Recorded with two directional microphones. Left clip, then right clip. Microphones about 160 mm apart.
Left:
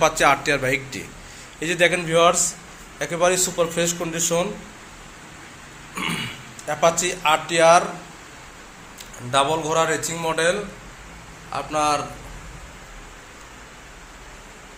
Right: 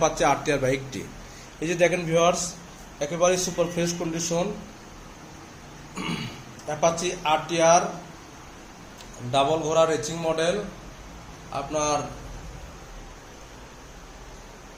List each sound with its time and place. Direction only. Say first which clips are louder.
0.0 s a man's voice: left 5 dB; centre (ahead or behind)
5.9 s burping: left 6 dB; 10° left (ahead or behind)
6.7 s speech: left 4 dB; 10° left (ahead or behind)
9.3 s a man's voice: left 2 dB; centre (ahead or behind)
11.5 s speech: left 5 dB; 5° left (ahead or behind)